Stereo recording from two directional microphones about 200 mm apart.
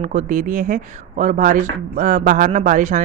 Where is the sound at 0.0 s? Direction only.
40° right (ahead or behind).